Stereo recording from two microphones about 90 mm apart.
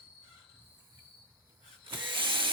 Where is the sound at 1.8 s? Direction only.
65° right (ahead or behind).